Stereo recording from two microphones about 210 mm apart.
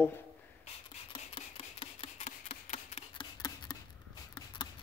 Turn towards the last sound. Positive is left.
turn(degrees=20)  # may be behind; listen again after turning